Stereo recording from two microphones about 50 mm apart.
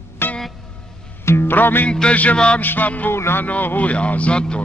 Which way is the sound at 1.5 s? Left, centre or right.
Left.